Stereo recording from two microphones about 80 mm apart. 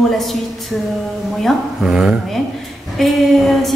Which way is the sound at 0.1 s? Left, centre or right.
Centre.